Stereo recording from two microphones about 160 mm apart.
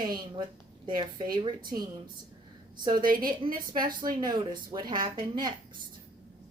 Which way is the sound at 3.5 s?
60° right (ahead or behind).